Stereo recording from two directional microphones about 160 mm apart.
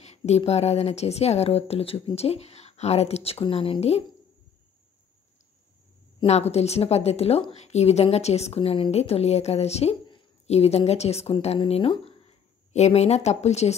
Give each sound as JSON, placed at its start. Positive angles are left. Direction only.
{"t": 0.0, "sound": "speech", "side_deg": 40}
{"t": 6.2, "sound": "a woman's voice", "side_deg": 40}